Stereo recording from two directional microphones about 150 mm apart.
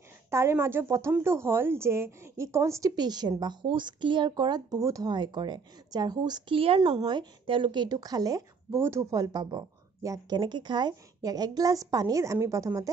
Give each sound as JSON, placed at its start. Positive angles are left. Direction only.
{"t": 0.3, "sound": "speech", "side_deg": -20}